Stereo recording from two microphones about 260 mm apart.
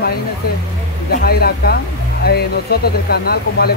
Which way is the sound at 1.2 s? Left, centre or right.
Left.